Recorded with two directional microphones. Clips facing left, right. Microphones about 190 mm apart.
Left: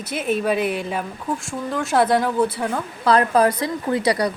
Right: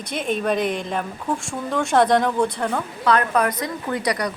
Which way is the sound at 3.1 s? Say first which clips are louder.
Left 3 dB; 30° left (ahead or behind).